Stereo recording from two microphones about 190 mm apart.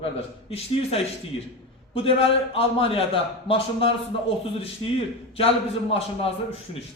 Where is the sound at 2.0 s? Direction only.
30° left (ahead or behind).